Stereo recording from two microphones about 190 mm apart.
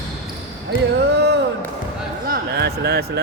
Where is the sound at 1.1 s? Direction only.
60° right (ahead or behind).